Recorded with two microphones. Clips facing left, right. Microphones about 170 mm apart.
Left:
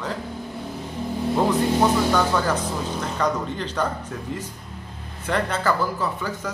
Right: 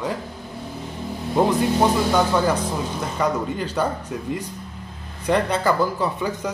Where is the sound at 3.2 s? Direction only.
10° right (ahead or behind).